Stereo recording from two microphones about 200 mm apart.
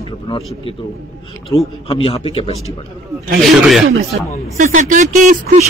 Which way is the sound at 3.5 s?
Centre (ahead or behind).